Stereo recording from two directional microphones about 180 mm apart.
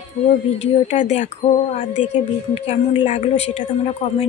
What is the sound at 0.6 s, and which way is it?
Speech, 35° left (ahead or behind).